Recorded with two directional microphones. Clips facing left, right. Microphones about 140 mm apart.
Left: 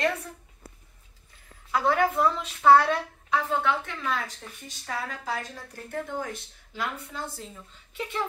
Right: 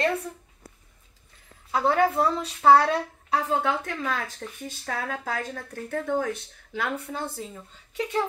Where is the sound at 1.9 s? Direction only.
35° right (ahead or behind).